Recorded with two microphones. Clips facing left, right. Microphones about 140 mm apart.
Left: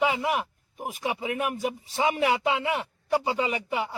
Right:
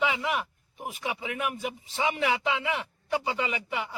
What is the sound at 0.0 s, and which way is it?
A man's voice, 40° left (ahead or behind).